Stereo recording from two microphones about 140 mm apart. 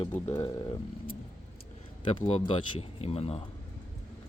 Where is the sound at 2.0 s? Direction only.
40° left (ahead or behind).